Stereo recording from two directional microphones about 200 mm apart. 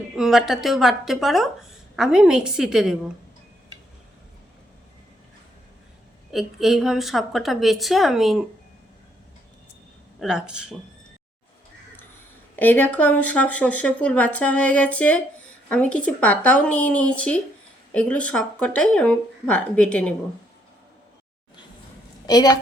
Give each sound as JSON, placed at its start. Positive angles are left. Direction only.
{"t": 0.2, "sound": "speech", "side_deg": 0}
{"t": 6.3, "sound": "speech", "side_deg": 0}
{"t": 10.2, "sound": "speech", "side_deg": -5}
{"t": 12.5, "sound": "speech", "side_deg": 10}
{"t": 22.3, "sound": "a woman's voice", "side_deg": 20}